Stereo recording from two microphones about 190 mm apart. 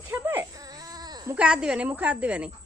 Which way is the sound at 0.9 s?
20° right (ahead or behind).